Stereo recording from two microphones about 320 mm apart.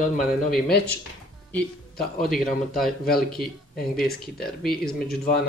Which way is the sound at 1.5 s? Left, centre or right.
Centre.